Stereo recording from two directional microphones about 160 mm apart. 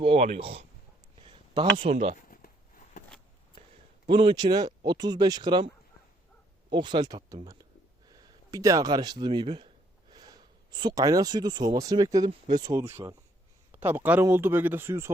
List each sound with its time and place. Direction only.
0.0 s speech: 40° right (ahead or behind)
2.1 s a sound: 60° left (ahead or behind)
4.1 s speech: 30° right (ahead or behind)
6.7 s speech: 30° right (ahead or behind)